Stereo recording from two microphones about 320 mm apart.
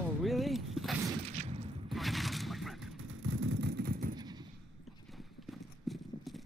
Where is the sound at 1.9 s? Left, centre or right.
Centre.